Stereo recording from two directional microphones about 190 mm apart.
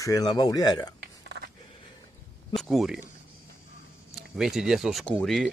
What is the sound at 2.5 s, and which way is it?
Speech, centre (ahead or behind).